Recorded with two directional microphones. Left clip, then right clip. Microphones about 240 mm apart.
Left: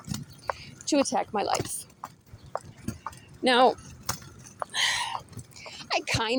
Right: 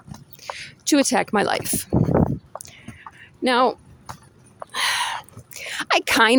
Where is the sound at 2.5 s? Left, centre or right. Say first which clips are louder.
Left 2 dB; left.